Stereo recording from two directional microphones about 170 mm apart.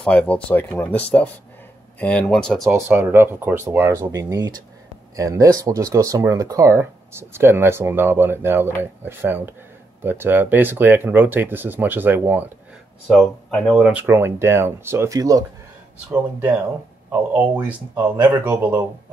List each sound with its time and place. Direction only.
0.0 s speech: 10° left (ahead or behind)
2.7 s speech: 15° right (ahead or behind)
13.1 s speech: 5° left (ahead or behind); by 15.4 s 20° right (ahead or behind)
16.1 s speech: 10° right (ahead or behind)